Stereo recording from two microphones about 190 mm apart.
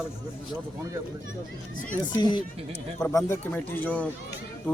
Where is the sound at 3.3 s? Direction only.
10° left (ahead or behind).